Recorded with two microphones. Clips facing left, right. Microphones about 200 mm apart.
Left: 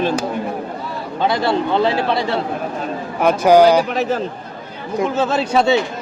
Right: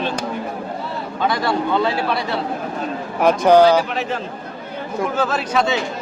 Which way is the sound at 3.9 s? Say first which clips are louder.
Left 4 dB; 40° left (ahead or behind).